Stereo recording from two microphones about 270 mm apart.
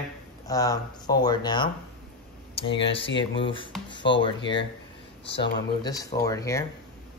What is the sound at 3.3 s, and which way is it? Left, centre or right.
Speech, centre.